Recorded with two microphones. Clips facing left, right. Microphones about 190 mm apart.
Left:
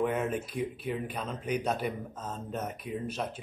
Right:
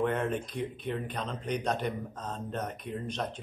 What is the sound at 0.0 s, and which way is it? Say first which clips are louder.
Speech: even; 5° left (ahead or behind).